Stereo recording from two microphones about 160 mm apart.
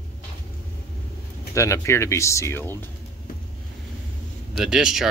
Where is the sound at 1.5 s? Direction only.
20° left (ahead or behind).